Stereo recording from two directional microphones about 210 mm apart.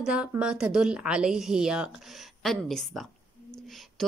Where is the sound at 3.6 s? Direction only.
Centre (ahead or behind).